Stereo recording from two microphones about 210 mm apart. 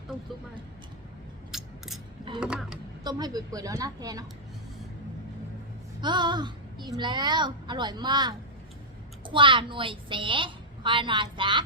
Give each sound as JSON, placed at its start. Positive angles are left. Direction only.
{"t": 1.5, "sound": "gears", "side_deg": 0}
{"t": 2.4, "sound": "a sound", "side_deg": -5}
{"t": 3.0, "sound": "a woman's voice", "side_deg": -20}
{"t": 6.0, "sound": "a woman's voice", "side_deg": -20}